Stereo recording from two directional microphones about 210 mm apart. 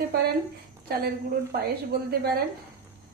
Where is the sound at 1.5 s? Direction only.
50° right (ahead or behind).